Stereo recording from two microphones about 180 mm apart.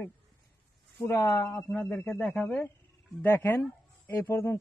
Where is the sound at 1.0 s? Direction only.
15° left (ahead or behind).